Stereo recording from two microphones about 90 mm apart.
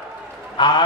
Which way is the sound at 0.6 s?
55° left (ahead or behind).